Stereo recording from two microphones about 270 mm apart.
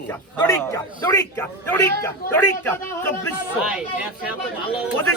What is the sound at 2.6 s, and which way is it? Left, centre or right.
Speech, centre.